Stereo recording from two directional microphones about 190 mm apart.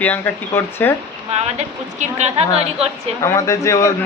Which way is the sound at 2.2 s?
35° right (ahead or behind).